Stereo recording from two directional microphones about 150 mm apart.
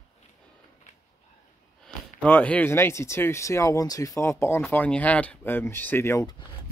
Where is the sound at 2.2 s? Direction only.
10° left (ahead or behind).